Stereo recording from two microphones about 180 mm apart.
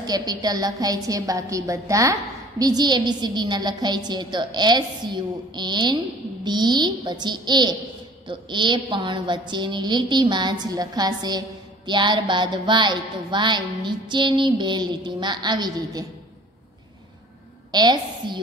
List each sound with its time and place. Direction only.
0.0 s a woman's voice: 20° right (ahead or behind)
17.6 s a woman's voice: 25° right (ahead or behind)